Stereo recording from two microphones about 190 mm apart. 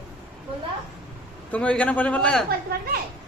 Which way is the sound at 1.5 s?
5° left (ahead or behind).